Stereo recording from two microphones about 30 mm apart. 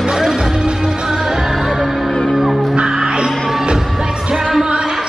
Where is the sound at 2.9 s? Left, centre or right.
Right.